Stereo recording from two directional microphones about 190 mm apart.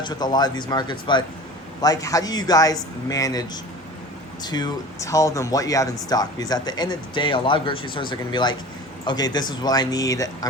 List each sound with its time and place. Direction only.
0.0 s speech: 20° left (ahead or behind)